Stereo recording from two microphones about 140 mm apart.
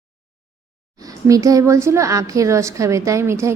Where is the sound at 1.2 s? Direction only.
25° right (ahead or behind).